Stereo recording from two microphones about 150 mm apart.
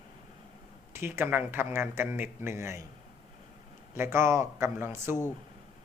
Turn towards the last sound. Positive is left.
turn(degrees=-15)  # may be behind; listen again after turning